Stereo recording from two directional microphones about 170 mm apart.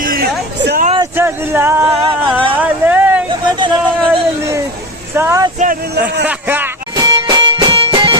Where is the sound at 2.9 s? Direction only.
10° right (ahead or behind).